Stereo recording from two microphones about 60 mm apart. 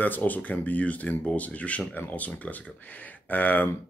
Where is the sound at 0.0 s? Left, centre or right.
Left.